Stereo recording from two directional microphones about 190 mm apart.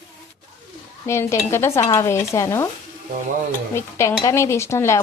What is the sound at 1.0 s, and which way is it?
Speech, 15° left (ahead or behind).